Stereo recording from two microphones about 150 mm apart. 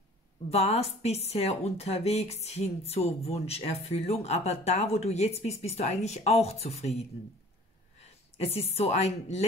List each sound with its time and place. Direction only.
0.5 s speech: 45° left (ahead or behind)